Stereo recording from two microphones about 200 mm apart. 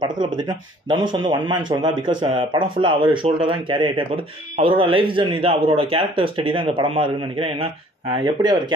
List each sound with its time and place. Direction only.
0.8 s a man's voice: 25° right (ahead or behind)